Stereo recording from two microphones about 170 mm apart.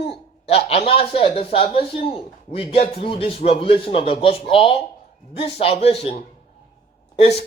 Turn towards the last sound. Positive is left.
turn(degrees=40)  # may be behind; listen again after turning